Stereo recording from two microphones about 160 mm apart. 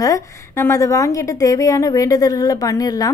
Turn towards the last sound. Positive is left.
turn(degrees=25)  # may be behind; listen again after turning